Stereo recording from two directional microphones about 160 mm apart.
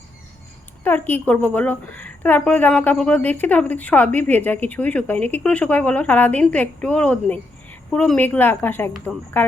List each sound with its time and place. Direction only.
0.9 s a woman's voice: 10° left (ahead or behind)